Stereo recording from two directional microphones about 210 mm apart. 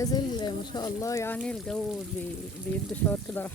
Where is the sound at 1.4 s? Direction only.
Centre (ahead or behind).